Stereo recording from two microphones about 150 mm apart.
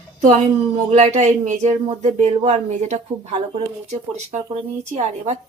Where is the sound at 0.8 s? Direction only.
50° right (ahead or behind).